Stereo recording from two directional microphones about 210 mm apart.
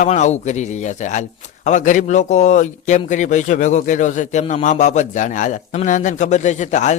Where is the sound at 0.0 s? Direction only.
35° left (ahead or behind).